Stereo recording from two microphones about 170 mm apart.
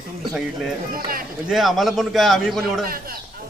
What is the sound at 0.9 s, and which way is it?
Speech, 60° right (ahead or behind).